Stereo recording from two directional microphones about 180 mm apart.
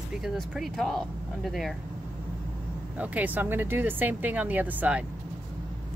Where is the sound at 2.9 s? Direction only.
10° right (ahead or behind).